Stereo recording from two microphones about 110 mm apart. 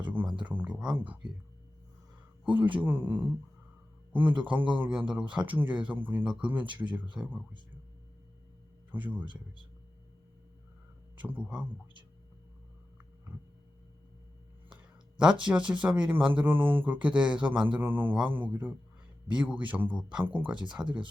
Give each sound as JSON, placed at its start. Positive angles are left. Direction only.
{"t": 0.1, "sound": "a sound", "side_deg": -15}
{"t": 0.4, "sound": "speech", "side_deg": -15}
{"t": 2.4, "sound": "speech", "side_deg": -15}
{"t": 6.7, "sound": "a man's voice", "side_deg": -45}
{"t": 7.2, "sound": "speech", "side_deg": -5}
{"t": 8.9, "sound": "speech", "side_deg": -15}
{"t": 9.2, "sound": "a man's voice", "side_deg": -45}
{"t": 11.2, "sound": "speech", "side_deg": -15}
{"t": 15.2, "sound": "speech", "side_deg": -10}